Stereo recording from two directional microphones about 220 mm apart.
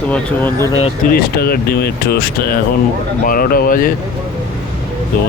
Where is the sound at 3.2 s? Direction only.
40° left (ahead or behind).